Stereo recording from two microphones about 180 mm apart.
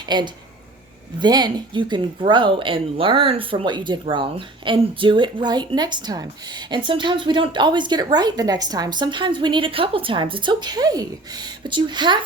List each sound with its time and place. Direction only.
0.0 s speech: 25° right (ahead or behind)